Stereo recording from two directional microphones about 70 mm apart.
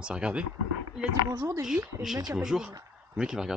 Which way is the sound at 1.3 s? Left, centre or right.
Right.